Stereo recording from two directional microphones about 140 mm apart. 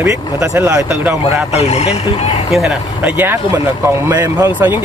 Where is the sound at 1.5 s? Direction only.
50° left (ahead or behind).